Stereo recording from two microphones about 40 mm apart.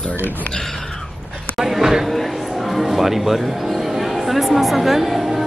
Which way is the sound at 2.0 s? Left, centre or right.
Centre.